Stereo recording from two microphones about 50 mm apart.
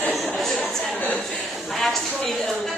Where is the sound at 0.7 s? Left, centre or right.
Centre.